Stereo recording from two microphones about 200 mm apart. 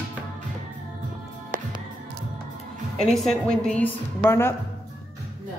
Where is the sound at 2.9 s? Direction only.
Centre (ahead or behind).